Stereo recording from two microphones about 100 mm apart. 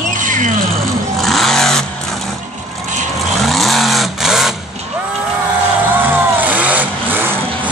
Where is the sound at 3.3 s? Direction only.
Centre (ahead or behind).